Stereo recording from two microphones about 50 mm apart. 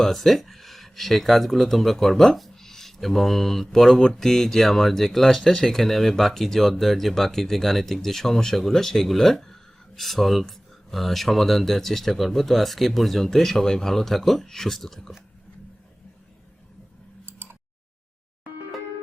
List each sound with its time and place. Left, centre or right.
0.0 s speech: centre
17.2 s tick: right